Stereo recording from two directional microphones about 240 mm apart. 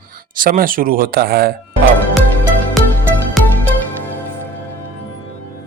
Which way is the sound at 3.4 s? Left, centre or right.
Centre.